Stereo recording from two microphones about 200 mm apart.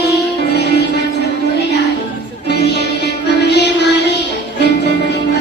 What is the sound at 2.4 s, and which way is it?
Music, 55° left (ahead or behind).